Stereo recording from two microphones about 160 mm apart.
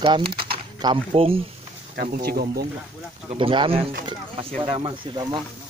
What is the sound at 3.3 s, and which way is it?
Speech, 30° right (ahead or behind).